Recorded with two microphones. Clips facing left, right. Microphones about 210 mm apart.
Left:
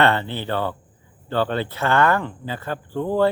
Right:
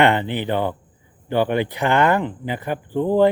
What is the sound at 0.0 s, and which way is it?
Speech, 15° right (ahead or behind).